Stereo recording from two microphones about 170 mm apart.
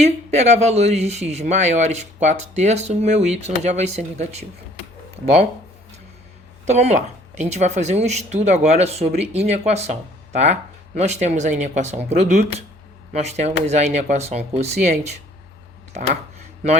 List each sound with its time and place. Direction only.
0.0 s speech: 40° right (ahead or behind)
6.7 s speech: 40° right (ahead or behind)